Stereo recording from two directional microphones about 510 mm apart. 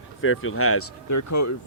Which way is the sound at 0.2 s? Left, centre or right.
Left.